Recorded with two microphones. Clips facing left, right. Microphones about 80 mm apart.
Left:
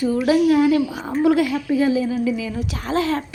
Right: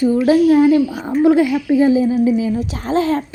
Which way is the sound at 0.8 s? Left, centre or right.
Left.